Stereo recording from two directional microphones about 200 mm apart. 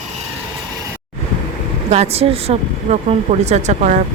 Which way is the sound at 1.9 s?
30° right (ahead or behind).